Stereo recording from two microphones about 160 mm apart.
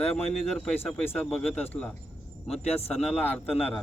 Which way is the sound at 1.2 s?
10° left (ahead or behind).